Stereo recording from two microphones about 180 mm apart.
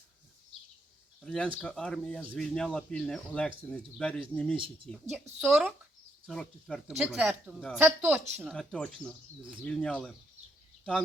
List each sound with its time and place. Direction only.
1.2 s speech: 5° left (ahead or behind)
4.5 s speech: 30° right (ahead or behind)
5.4 s a sound: 5° right (ahead or behind)
6.3 s speech: centre (ahead or behind)
8.5 s speech: 5° left (ahead or behind)